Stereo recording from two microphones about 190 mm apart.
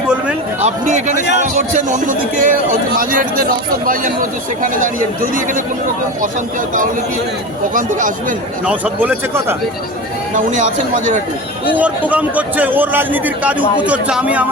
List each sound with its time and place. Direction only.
0.6 s speech: 40° right (ahead or behind)
7.7 s speech: 45° right (ahead or behind)
8.6 s a man's voice: 10° right (ahead or behind)
10.3 s speech: 40° right (ahead or behind)
11.7 s a man's voice: 10° right (ahead or behind)